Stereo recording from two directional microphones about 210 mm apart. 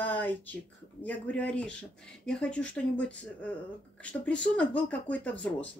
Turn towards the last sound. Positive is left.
turn(degrees=5)  # may be behind; listen again after turning